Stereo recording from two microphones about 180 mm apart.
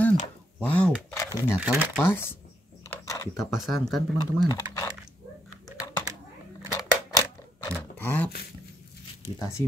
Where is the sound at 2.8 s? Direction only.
20° left (ahead or behind).